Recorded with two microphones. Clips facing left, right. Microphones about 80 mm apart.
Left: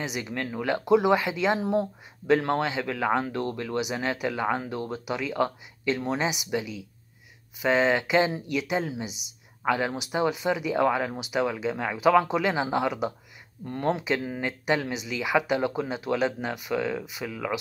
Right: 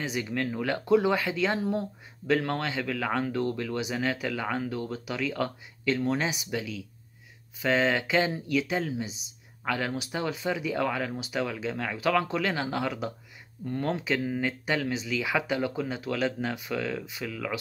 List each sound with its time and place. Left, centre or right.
0.0 s speech: centre